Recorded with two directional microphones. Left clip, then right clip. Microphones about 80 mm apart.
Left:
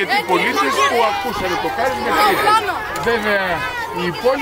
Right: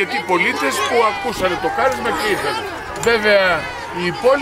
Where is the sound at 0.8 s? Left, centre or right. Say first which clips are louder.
Even; left.